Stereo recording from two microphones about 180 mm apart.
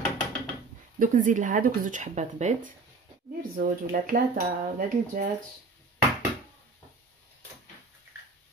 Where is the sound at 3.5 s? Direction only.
50° right (ahead or behind).